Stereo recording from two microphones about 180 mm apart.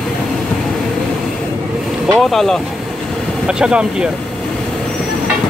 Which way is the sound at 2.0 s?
Centre (ahead or behind).